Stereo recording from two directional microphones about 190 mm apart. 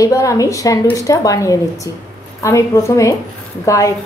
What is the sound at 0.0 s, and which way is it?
A woman's voice, 15° left (ahead or behind).